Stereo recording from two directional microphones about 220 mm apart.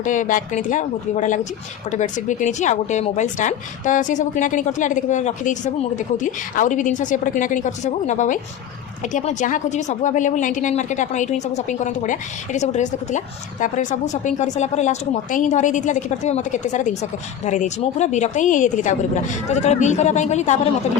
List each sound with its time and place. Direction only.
0.0 s speech: 35° left (ahead or behind)